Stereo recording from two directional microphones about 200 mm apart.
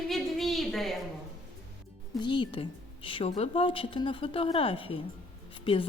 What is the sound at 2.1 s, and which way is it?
A woman's voice, 25° left (ahead or behind).